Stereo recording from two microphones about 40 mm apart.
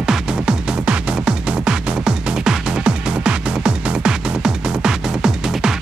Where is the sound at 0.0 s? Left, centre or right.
Centre.